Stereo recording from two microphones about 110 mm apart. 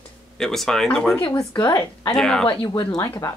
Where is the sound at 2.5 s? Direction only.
40° left (ahead or behind).